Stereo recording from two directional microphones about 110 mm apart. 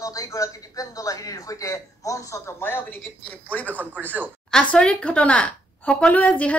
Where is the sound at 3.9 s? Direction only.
15° right (ahead or behind).